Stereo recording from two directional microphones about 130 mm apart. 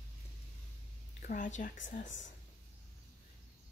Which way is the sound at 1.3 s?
70° left (ahead or behind).